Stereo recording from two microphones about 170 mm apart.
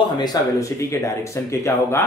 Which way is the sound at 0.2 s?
20° left (ahead or behind).